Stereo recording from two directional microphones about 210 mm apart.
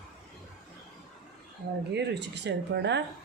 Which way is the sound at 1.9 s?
55° right (ahead or behind).